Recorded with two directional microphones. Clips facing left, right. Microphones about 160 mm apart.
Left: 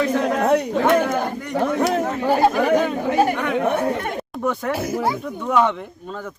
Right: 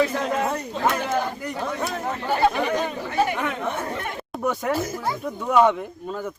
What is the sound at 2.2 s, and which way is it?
Music, 40° left (ahead or behind).